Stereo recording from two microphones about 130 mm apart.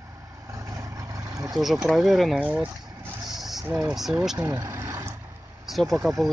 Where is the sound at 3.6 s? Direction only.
5° right (ahead or behind).